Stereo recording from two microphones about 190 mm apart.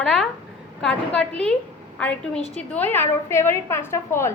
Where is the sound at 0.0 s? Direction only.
5° left (ahead or behind).